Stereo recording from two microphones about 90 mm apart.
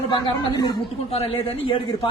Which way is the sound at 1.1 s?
90° left.